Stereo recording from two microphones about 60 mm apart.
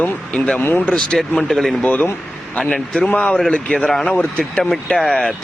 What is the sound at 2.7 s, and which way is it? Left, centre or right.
A man's voice, left.